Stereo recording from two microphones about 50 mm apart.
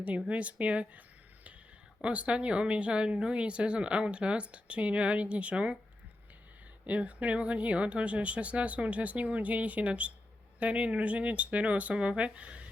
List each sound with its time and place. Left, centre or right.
0.3 s speech: right
6.8 s speech: right